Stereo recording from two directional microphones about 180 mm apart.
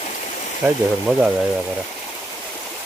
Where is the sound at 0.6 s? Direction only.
5° right (ahead or behind).